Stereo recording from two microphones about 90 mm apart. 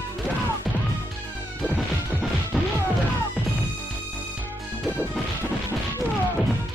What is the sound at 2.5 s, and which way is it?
Music, centre (ahead or behind).